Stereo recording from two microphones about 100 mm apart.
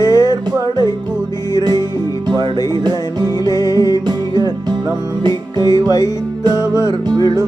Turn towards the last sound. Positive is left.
turn(degrees=-45)  # may be behind; listen again after turning